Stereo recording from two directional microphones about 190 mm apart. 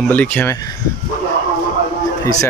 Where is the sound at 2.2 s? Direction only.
15° left (ahead or behind).